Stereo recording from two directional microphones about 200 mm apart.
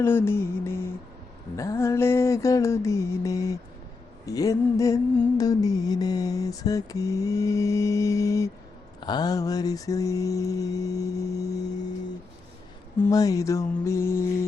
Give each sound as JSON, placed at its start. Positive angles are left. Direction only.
{"t": 0.0, "sound": "music", "side_deg": 10}
{"t": 13.1, "sound": "music", "side_deg": 15}